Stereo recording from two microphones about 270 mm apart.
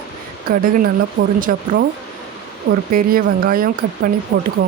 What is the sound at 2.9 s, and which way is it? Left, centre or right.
Speech, right.